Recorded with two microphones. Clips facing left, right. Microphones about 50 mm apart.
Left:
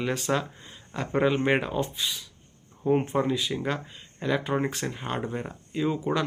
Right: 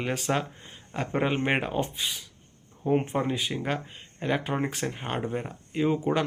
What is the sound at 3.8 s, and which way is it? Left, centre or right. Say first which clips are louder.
Speech: even; right.